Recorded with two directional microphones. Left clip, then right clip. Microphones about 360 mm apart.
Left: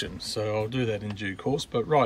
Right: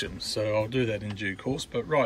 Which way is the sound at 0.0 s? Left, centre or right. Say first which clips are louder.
Right 1 dB; centre.